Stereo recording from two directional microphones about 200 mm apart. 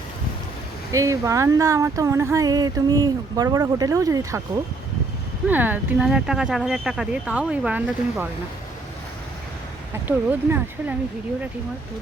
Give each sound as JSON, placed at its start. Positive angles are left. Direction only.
{"t": 0.9, "sound": "speech", "side_deg": -15}
{"t": 5.5, "sound": "speech", "side_deg": -10}
{"t": 10.1, "sound": "speech", "side_deg": -10}